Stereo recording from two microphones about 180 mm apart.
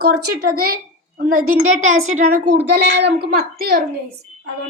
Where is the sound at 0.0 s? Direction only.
55° right (ahead or behind).